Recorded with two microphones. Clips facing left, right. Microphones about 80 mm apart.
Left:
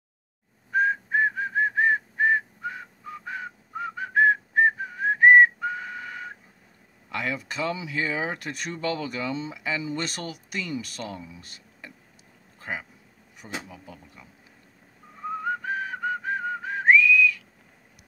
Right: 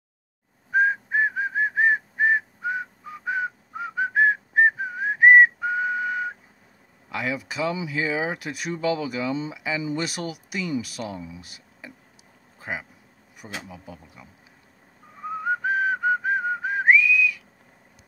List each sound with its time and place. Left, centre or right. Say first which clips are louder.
0.7 s whistling: right 2 dB; centre
7.1 s speech: right 2 dB; centre
12.5 s a sound: right 1 dB; centre
13.4 s speech: even; centre
15.2 s whistling: right 3 dB; centre